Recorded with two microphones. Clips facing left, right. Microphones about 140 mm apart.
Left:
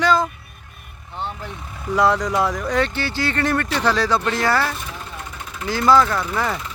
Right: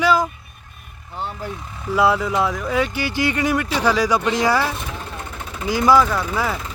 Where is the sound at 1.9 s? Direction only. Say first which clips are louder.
Even; 5° right (ahead or behind).